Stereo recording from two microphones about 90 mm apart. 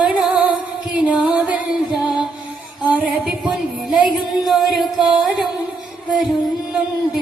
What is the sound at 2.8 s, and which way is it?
Music, 15° right (ahead or behind).